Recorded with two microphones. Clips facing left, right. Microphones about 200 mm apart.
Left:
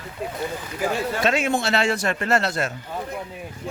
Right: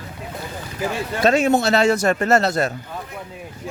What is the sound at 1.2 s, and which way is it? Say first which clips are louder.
A man's voice: right 8 dB; 40° right (ahead or behind).